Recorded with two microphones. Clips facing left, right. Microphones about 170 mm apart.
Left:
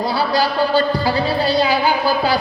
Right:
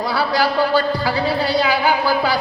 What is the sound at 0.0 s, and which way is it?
A man's voice, 25° left (ahead or behind).